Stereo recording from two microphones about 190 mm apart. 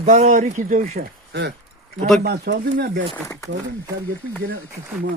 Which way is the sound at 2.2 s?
60° right (ahead or behind).